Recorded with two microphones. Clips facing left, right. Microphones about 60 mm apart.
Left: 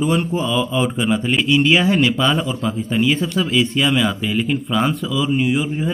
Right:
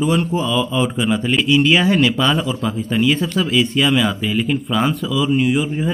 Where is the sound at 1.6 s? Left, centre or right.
Left.